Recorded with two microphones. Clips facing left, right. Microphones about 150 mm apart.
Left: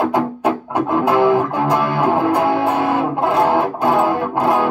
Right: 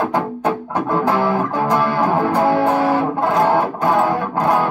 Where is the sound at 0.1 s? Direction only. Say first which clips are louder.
Left 2 dB; 10° left (ahead or behind).